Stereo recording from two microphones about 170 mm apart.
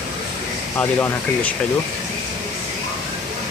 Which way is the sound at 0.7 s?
15° left (ahead or behind).